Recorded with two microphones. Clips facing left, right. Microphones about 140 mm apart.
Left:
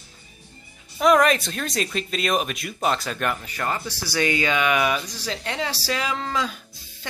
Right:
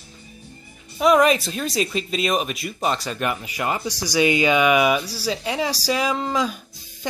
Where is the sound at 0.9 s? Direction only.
Centre (ahead or behind).